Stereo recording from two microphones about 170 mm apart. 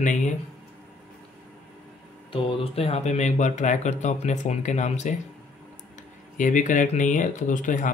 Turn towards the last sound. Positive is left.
turn(degrees=50)  # may be behind; listen again after turning